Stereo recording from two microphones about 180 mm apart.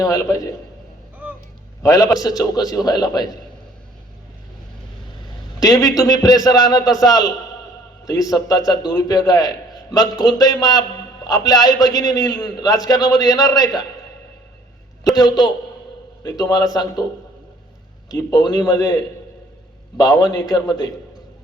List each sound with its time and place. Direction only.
0.0 s a man's voice: 20° left (ahead or behind)
1.8 s a man's voice: 20° left (ahead or behind)
5.5 s a man's voice: 20° left (ahead or behind)
15.1 s a man's voice: 20° left (ahead or behind)
18.1 s a man's voice: 20° left (ahead or behind)
20.0 s a man's voice: 20° left (ahead or behind)